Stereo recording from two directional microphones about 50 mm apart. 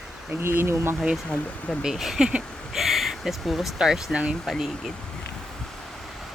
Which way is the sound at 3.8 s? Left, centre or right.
Centre.